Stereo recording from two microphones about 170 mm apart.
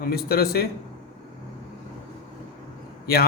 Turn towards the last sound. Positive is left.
turn(degrees=65)  # may be behind; listen again after turning